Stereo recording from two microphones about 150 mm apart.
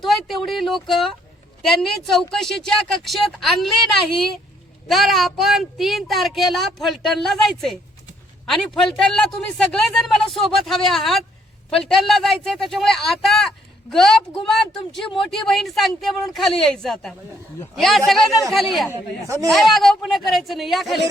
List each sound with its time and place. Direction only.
0.0 s a woman's voice: centre (ahead or behind)
18.9 s speech: 20° right (ahead or behind)
19.5 s a woman's voice: centre (ahead or behind)